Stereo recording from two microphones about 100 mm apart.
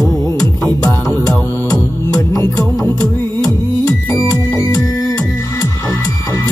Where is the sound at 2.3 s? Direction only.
30° left (ahead or behind).